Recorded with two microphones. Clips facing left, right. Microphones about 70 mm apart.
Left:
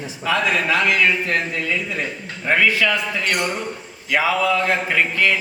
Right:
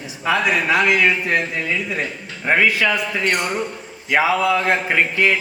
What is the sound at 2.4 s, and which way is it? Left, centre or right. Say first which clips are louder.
Speech: right 1 dB; centre.